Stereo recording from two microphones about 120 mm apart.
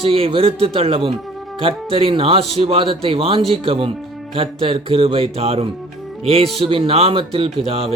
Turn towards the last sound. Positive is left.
turn(degrees=-55)  # may be behind; listen again after turning